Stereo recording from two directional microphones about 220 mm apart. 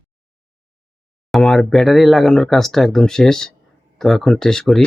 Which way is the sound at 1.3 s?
Centre (ahead or behind).